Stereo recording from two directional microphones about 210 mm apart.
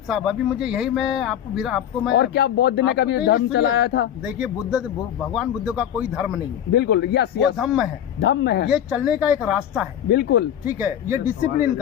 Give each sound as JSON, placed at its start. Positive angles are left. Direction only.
{"t": 0.1, "sound": "speech", "side_deg": 0}
{"t": 2.1, "sound": "speech", "side_deg": 55}
{"t": 4.3, "sound": "speech", "side_deg": -5}
{"t": 6.7, "sound": "speech", "side_deg": 55}
{"t": 7.5, "sound": "speech", "side_deg": 0}
{"t": 8.2, "sound": "speech", "side_deg": 55}
{"t": 8.7, "sound": "speech", "side_deg": -5}
{"t": 10.1, "sound": "speech", "side_deg": 55}
{"t": 10.7, "sound": "speech", "side_deg": -5}